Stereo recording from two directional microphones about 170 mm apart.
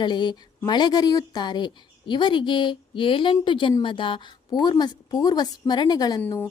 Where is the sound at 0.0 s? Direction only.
25° left (ahead or behind).